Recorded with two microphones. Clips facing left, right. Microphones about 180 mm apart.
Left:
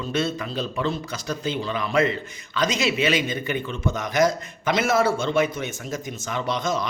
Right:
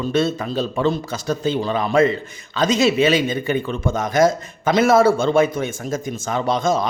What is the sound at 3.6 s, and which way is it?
A man's voice, 50° right (ahead or behind).